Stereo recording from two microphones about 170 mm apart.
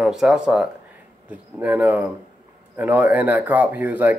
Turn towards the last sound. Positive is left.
turn(degrees=-10)  # may be behind; listen again after turning